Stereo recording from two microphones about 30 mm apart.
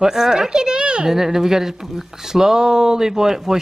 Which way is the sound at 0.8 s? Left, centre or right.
Right.